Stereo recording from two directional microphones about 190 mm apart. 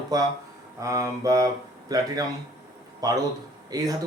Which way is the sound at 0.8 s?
15° right (ahead or behind).